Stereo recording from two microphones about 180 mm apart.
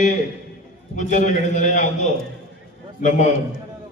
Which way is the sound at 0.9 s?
40° left (ahead or behind).